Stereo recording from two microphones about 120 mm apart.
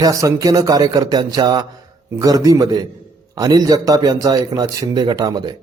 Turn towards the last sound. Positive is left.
turn(degrees=-35)  # may be behind; listen again after turning